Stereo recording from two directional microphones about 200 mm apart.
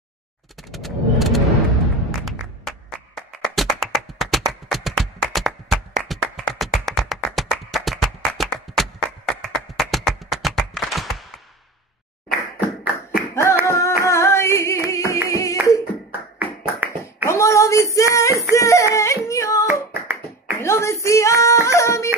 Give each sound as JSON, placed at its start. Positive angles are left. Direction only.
{"t": 0.7, "sound": "a sound", "side_deg": 0}
{"t": 2.0, "sound": "thump", "side_deg": 0}
{"t": 3.2, "sound": "tap", "side_deg": 0}
{"t": 4.5, "sound": "music", "side_deg": 0}
{"t": 6.9, "sound": "a sound", "side_deg": 0}
{"t": 12.3, "sound": "tap", "side_deg": -5}
{"t": 13.3, "sound": "flamenco", "side_deg": 15}
{"t": 13.7, "sound": "singing", "side_deg": 15}
{"t": 15.2, "sound": "clapping", "side_deg": 15}
{"t": 16.1, "sound": "clapping", "side_deg": -10}
{"t": 17.3, "sound": "a sound", "side_deg": 15}
{"t": 19.7, "sound": "clapping", "side_deg": -10}
{"t": 20.5, "sound": "female singing", "side_deg": 15}